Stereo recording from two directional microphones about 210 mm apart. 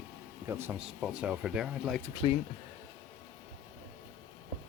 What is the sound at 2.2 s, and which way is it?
Speech, 25° left (ahead or behind).